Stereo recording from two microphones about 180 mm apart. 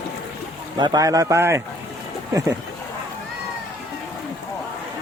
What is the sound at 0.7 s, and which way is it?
Speech, 20° right (ahead or behind).